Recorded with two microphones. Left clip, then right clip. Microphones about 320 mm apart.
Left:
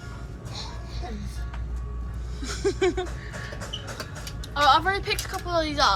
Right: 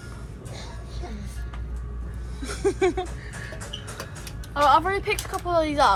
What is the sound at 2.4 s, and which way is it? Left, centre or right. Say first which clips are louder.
Speech: right 1 dB; centre.